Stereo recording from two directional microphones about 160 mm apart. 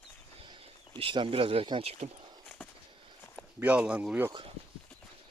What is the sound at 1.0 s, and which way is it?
Speech, 35° right (ahead or behind).